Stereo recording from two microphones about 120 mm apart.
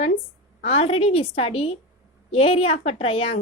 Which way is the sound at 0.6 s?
55° left (ahead or behind).